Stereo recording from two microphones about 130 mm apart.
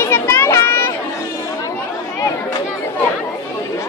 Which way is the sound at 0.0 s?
15° left (ahead or behind).